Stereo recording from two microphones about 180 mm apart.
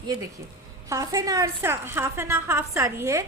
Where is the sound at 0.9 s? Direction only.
20° right (ahead or behind).